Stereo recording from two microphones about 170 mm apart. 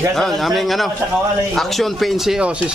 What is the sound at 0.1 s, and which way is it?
Speech, centre (ahead or behind).